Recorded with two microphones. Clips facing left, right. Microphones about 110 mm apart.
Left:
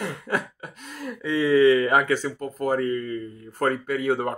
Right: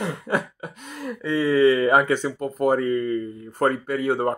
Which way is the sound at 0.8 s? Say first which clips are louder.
Right 2 dB; centre (ahead or behind).